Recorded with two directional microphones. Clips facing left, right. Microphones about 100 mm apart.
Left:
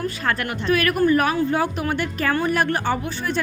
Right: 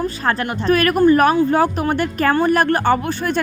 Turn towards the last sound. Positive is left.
turn(degrees=-55)  # may be behind; listen again after turning